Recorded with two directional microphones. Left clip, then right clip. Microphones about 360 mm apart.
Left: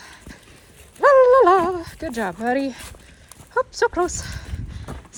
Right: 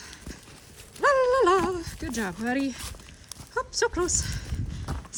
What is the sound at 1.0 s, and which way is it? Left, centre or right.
Dog, centre.